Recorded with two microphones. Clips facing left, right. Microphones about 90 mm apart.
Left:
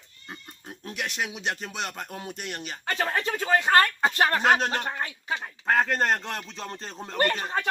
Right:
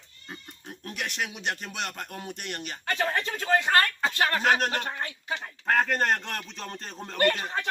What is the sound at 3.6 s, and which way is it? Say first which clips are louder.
Speech: left 3 dB; 30° left (ahead or behind).